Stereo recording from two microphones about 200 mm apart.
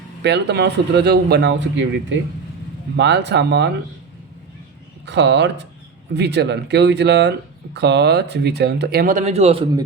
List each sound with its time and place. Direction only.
0.2 s speech: 60° right (ahead or behind)
5.0 s speech: 60° right (ahead or behind); by 9.6 s 30° right (ahead or behind)